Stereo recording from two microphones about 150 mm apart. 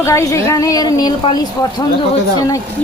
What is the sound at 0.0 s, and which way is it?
A woman's voice, 20° left (ahead or behind).